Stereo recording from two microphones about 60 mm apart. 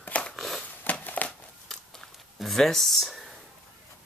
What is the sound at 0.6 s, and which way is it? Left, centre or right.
Crumpling, left.